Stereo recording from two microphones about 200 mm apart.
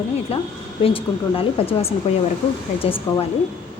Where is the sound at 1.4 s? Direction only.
30° left (ahead or behind).